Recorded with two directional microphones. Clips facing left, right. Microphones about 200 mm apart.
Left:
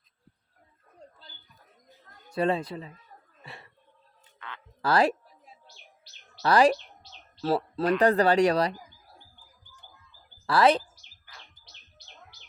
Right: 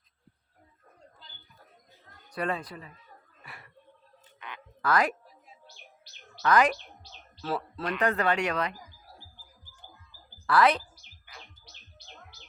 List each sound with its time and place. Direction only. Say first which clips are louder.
2.3 s speech: left 6 dB; 25° left (ahead or behind)
3.4 s a sound: left 4 dB; 25° left (ahead or behind)
4.4 s a sound: even; 15° right (ahead or behind)
4.8 s speech: left 3 dB; 30° left (ahead or behind)
6.4 s speech: left 3 dB; 30° left (ahead or behind)
10.4 s speech: left 2 dB; 30° left (ahead or behind)